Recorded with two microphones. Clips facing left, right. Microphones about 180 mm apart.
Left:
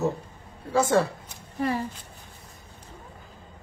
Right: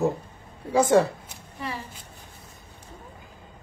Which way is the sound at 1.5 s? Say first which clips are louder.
Left 8 dB; 50° left (ahead or behind).